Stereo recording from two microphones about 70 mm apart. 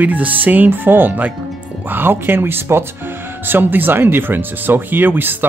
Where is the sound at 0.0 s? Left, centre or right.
Right.